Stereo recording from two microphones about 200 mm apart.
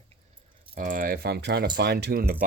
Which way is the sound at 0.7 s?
45° right (ahead or behind).